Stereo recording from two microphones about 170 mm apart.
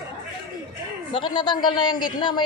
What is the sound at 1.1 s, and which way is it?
Speech, 30° left (ahead or behind).